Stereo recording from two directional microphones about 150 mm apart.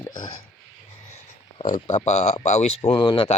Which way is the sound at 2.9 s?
35° left (ahead or behind).